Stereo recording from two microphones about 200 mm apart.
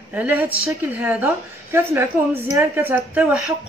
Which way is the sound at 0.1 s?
10° right (ahead or behind).